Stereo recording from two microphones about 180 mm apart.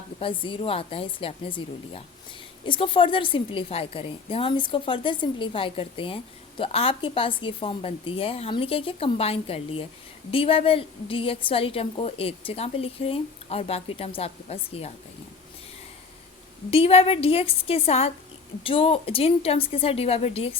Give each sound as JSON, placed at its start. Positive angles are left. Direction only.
{"t": 0.2, "sound": "a woman's voice", "side_deg": 30}
{"t": 16.7, "sound": "a woman's voice", "side_deg": 35}